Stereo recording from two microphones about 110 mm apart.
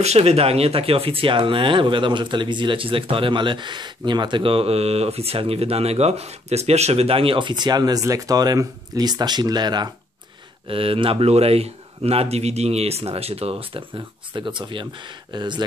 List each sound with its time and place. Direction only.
0.0 s speech: 75° right (ahead or behind); by 9.8 s 40° right (ahead or behind)
10.7 s speech: 55° right (ahead or behind)
13.9 s speech: 45° right (ahead or behind)